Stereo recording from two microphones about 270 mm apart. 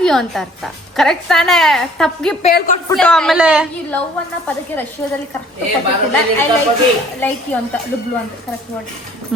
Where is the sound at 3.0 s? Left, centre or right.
Centre.